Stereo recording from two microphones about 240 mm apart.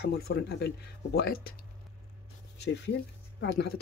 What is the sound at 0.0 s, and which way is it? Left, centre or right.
Speech, left.